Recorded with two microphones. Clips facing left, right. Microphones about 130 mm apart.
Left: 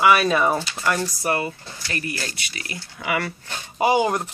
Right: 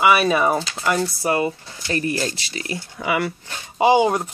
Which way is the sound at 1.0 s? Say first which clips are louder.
Right 3 dB; 20° right (ahead or behind).